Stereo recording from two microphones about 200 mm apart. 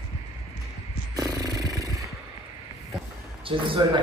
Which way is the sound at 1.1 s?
20° right (ahead or behind).